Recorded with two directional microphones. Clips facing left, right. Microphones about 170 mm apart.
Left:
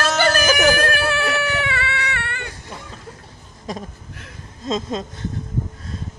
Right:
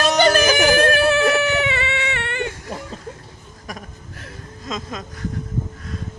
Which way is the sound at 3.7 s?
25° left (ahead or behind).